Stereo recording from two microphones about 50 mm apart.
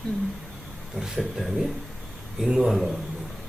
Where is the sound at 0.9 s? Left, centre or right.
Centre.